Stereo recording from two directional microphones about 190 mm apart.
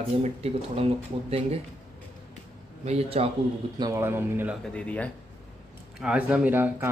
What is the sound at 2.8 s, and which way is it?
Speech, 35° right (ahead or behind).